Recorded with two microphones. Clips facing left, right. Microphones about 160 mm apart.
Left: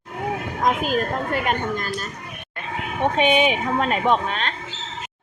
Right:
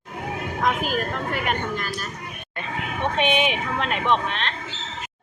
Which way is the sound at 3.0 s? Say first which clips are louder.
Left 4 dB; 40° left (ahead or behind).